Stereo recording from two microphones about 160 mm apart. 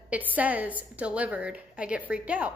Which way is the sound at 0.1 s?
10° right (ahead or behind).